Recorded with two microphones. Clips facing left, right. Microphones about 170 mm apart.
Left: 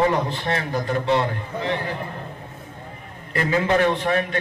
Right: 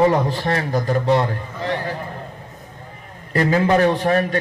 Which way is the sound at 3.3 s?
35° right (ahead or behind).